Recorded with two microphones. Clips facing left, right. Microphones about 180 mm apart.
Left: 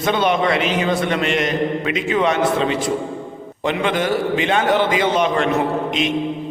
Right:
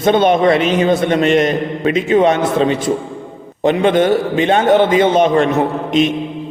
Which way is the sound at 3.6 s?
45° right (ahead or behind).